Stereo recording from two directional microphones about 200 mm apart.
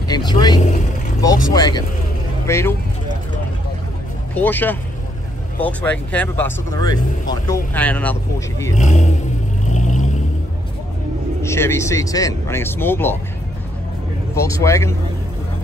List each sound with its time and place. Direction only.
0.1 s speech: 20° left (ahead or behind)
4.4 s speech: 10° left (ahead or behind)
8.7 s speech: 35° left (ahead or behind)
9.7 s vehicle: 35° left (ahead or behind)
11.4 s speech: 15° left (ahead or behind)
14.3 s speech: 15° left (ahead or behind)